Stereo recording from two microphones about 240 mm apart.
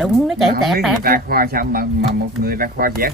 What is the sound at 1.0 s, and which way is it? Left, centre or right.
Speech, right.